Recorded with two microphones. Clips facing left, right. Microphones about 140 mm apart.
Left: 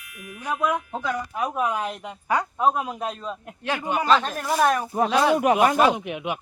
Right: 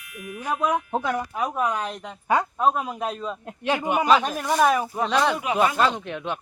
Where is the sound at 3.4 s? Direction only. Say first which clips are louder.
Right 4 dB; 20° right (ahead or behind).